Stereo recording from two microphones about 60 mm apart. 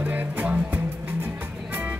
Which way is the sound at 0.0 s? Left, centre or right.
Right.